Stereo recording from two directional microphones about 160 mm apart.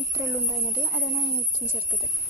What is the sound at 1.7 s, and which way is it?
Speech, 10° right (ahead or behind).